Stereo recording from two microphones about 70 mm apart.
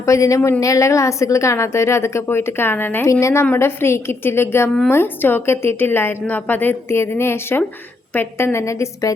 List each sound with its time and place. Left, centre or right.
0.0 s a woman's voice: left
3.1 s a woman's voice: left